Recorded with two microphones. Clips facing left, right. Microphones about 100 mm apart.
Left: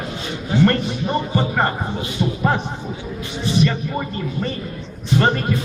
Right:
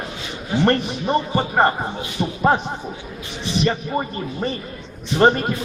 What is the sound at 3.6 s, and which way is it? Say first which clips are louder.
Speech: right 1 dB; 25° right (ahead or behind).